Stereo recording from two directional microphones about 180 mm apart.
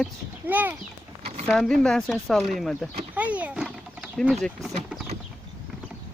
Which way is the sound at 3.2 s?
10° right (ahead or behind).